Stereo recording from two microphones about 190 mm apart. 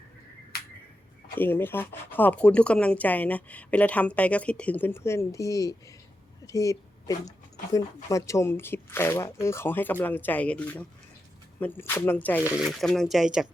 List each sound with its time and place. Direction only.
1.4 s speech: 10° left (ahead or behind)
12.4 s speech: 5° right (ahead or behind)